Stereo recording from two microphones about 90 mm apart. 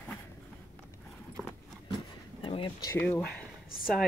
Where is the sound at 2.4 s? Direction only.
70° left (ahead or behind).